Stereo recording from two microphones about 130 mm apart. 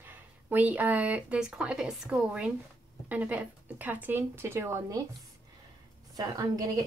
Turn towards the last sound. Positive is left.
turn(degrees=-25)  # may be behind; listen again after turning